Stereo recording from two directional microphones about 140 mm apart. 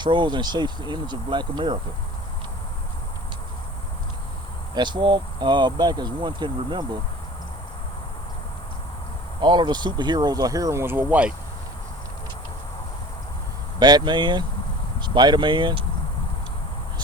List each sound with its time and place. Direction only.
0.0 s speech: 35° right (ahead or behind)
4.7 s speech: 35° right (ahead or behind)
9.4 s speech: 30° right (ahead or behind); by 11.3 s 10° right (ahead or behind)
13.7 s speech: 30° right (ahead or behind)